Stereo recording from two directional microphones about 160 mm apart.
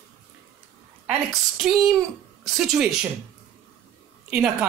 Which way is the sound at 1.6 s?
Centre (ahead or behind).